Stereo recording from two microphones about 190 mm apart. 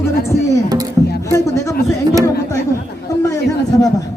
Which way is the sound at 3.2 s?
15° left (ahead or behind).